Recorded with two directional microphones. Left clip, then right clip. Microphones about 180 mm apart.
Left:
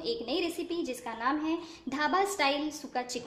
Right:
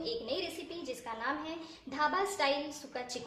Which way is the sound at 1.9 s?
35° left (ahead or behind).